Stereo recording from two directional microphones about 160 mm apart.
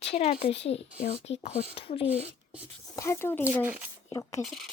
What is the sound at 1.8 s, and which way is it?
Speech, 35° left (ahead or behind).